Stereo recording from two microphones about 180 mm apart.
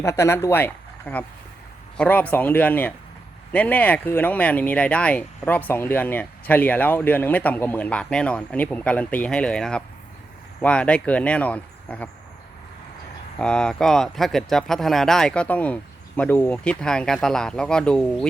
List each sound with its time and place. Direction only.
0.0 s speech: 15° left (ahead or behind)
13.4 s speech: 5° left (ahead or behind)